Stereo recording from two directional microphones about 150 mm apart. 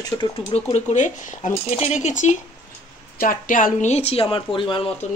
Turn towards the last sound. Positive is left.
turn(degrees=35)  # may be behind; listen again after turning